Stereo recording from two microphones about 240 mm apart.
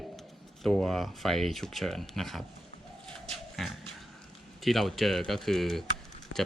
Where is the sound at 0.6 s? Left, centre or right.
Centre.